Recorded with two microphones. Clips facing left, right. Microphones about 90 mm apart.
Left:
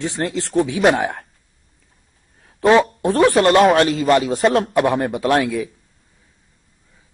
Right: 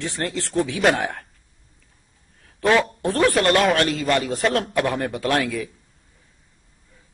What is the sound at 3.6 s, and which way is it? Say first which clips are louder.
Speech: left 6 dB; 35° left (ahead or behind).